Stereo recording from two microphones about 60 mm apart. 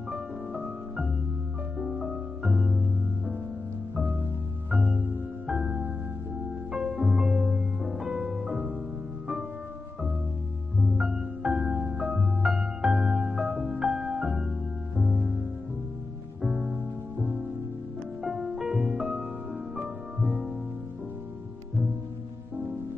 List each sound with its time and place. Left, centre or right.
0.1 s music: centre
1.8 s music: centre
4.6 s music: right
5.5 s music: centre
10.8 s music: centre; by 12.3 s right
12.4 s music: centre
16.3 s music: centre
18.2 s music: centre